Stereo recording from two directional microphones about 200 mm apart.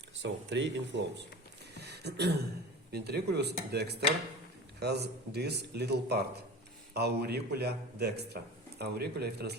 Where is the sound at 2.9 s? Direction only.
55° right (ahead or behind).